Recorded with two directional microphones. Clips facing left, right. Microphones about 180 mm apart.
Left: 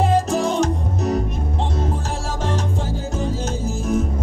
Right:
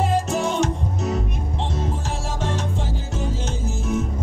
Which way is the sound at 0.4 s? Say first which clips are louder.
Left 2 dB; 35° left (ahead or behind).